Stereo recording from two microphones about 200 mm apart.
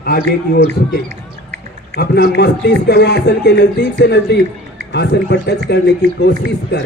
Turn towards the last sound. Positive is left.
turn(degrees=55)  # may be behind; listen again after turning